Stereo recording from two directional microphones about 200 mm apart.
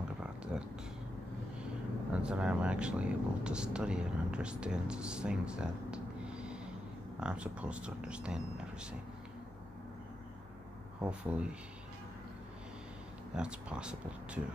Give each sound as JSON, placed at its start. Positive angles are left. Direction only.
{"t": 0.2, "sound": "a sound", "side_deg": -5}
{"t": 2.2, "sound": "speech", "side_deg": -5}
{"t": 11.0, "sound": "speech", "side_deg": -5}
{"t": 13.3, "sound": "speech", "side_deg": -5}